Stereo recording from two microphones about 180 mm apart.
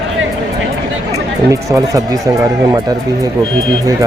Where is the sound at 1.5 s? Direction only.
20° right (ahead or behind).